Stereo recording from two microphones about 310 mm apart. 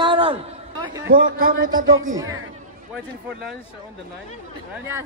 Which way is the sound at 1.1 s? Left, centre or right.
Right.